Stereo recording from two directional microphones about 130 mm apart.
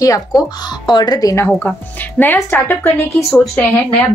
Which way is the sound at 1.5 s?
15° left (ahead or behind).